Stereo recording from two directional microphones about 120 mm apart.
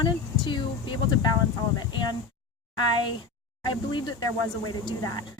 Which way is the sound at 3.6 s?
40° left (ahead or behind).